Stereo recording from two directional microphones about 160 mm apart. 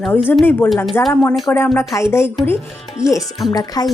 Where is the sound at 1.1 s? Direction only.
10° left (ahead or behind).